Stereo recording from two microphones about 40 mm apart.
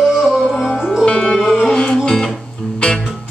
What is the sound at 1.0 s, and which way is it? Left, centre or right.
Music, left.